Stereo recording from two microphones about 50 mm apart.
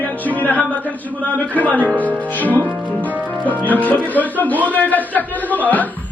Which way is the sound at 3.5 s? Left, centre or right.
Left.